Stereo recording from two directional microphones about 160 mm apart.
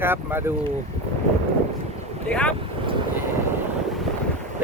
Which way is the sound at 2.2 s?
5° left (ahead or behind).